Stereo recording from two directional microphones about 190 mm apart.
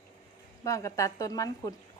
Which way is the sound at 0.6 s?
15° left (ahead or behind).